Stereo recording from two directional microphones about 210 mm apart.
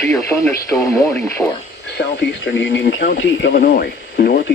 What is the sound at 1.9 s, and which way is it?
Speech, 55° left (ahead or behind).